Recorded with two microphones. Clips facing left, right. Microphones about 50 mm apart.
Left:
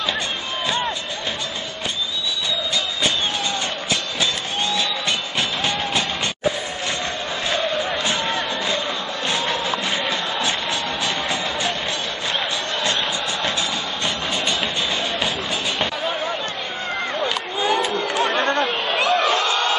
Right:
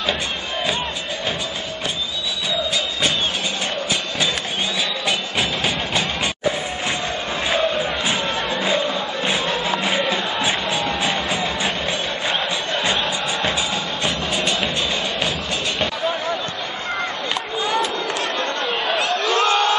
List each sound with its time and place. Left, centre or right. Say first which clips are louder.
7.4 s music: right 2 dB; centre
12.7 s music: right 2 dB; centre
18.1 s chatter: left 4 dB; left
18.9 s a sound: left 6 dB; left